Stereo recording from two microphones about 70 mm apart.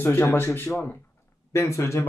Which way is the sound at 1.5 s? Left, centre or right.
Left.